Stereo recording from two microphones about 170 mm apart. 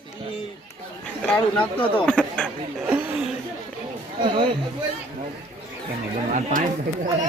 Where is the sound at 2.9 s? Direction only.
10° right (ahead or behind).